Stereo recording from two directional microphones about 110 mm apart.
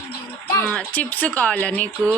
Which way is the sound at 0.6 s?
15° left (ahead or behind).